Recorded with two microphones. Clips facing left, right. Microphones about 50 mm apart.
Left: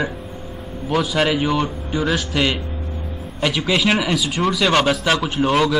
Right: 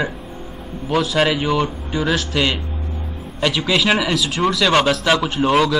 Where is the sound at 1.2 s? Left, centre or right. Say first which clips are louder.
Right 1 dB; centre.